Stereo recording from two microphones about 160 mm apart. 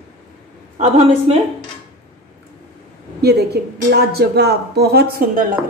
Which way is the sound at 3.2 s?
90° right.